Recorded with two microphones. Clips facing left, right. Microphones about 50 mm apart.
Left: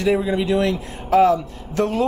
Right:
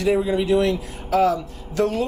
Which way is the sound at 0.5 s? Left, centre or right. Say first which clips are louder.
Right 1 dB; left.